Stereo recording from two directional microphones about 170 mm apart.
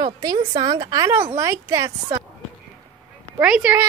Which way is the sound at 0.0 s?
25° right (ahead or behind).